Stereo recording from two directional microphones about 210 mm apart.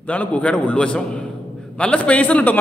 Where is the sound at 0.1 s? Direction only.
5° left (ahead or behind).